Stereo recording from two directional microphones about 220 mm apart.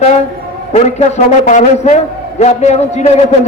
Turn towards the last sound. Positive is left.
turn(degrees=30)  # may be behind; listen again after turning